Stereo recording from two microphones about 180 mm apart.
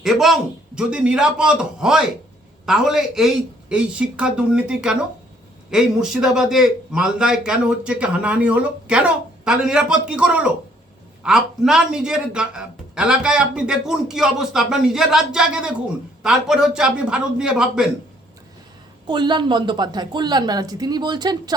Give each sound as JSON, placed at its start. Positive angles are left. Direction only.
{"t": 0.0, "sound": "speech", "side_deg": 0}
{"t": 19.0, "sound": "speech", "side_deg": -25}